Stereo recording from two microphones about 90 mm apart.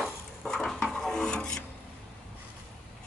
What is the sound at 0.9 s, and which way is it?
Filing, 10° left (ahead or behind).